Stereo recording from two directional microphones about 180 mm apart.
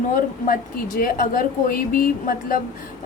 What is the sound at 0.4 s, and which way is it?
A woman's voice, 50° left (ahead or behind).